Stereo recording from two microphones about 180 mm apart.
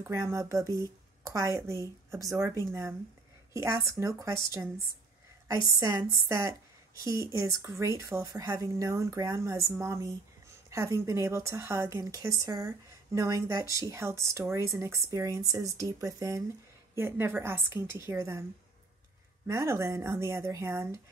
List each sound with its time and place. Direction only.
0.0 s speech: 15° right (ahead or behind)
19.4 s speech: 15° right (ahead or behind)